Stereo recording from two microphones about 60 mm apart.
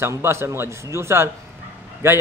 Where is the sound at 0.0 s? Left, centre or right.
Right.